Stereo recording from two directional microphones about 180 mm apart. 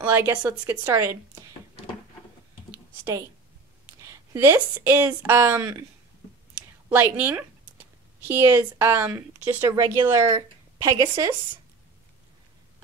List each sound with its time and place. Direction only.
0.0 s speech: 10° right (ahead or behind)
2.7 s computer keyboard: 15° right (ahead or behind)
4.3 s speech: 15° right (ahead or behind)
6.9 s speech: 10° right (ahead or behind)